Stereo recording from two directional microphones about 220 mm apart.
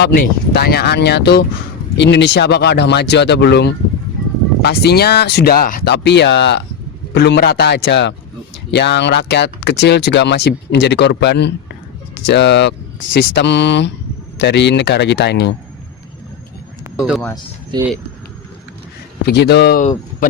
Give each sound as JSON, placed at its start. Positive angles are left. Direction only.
{"t": 0.0, "sound": "speech", "side_deg": 50}
{"t": 17.0, "sound": "speech", "side_deg": 0}
{"t": 17.7, "sound": "speech", "side_deg": -20}
{"t": 19.2, "sound": "speech", "side_deg": 50}